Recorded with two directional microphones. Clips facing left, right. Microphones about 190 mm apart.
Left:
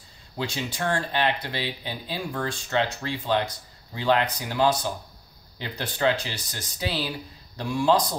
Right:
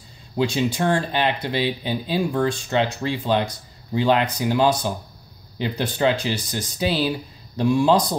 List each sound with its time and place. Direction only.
0.4 s speech: 15° right (ahead or behind)